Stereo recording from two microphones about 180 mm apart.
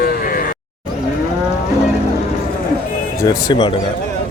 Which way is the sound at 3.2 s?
20° left (ahead or behind).